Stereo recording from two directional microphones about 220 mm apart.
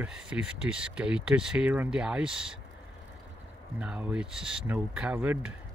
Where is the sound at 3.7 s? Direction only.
5° right (ahead or behind).